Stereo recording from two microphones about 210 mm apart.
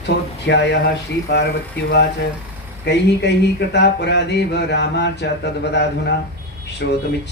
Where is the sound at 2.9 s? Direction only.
55° left (ahead or behind).